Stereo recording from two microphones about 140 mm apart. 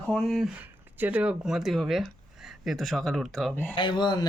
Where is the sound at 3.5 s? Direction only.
15° left (ahead or behind).